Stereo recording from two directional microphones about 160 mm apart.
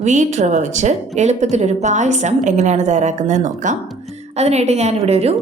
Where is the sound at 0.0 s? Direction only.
45° right (ahead or behind).